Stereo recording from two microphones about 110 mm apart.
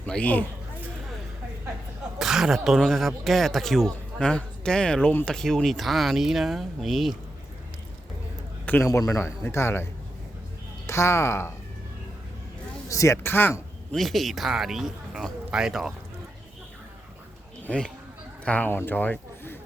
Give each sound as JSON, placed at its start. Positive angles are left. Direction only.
{"t": 0.0, "sound": "speech", "side_deg": 10}
{"t": 2.1, "sound": "speech", "side_deg": -5}
{"t": 8.6, "sound": "a man's voice", "side_deg": 15}
{"t": 8.9, "sound": "speech", "side_deg": 25}
{"t": 10.8, "sound": "speech", "side_deg": 25}
{"t": 12.9, "sound": "speech", "side_deg": 30}
{"t": 13.9, "sound": "speech", "side_deg": 0}
{"t": 17.6, "sound": "speech", "side_deg": 10}